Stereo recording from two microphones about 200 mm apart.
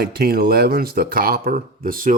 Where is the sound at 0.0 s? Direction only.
50° right (ahead or behind).